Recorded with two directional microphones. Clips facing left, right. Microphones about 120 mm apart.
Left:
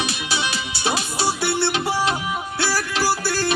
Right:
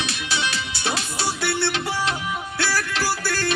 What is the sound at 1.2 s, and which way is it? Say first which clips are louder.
Music: left 3 dB; 30° left (ahead or behind).